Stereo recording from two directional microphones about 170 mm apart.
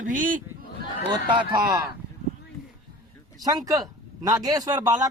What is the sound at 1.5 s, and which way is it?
Speech, 20° right (ahead or behind).